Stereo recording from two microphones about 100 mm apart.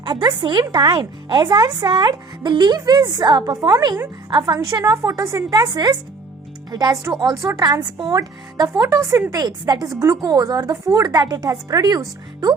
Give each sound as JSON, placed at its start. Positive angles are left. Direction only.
{"t": 0.0, "sound": "speech", "side_deg": -45}
{"t": 4.6, "sound": "speech", "side_deg": -35}
{"t": 5.5, "sound": "speech", "side_deg": -45}
{"t": 8.8, "sound": "speech", "side_deg": -30}